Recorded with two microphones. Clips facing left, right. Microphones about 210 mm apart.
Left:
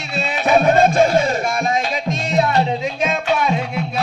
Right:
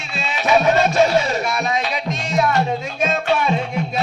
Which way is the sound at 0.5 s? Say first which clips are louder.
Left 2 dB; 50° left (ahead or behind).